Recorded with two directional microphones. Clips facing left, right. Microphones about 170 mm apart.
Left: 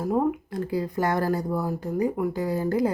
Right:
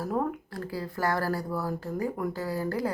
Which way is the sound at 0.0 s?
15° left (ahead or behind).